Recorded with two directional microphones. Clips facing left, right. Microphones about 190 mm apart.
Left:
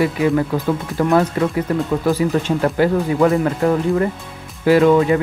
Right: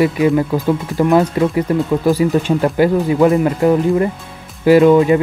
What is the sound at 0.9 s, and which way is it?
Speech, 15° right (ahead or behind).